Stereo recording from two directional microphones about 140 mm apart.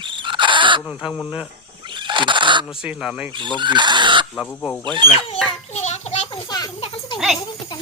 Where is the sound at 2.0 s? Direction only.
35° right (ahead or behind).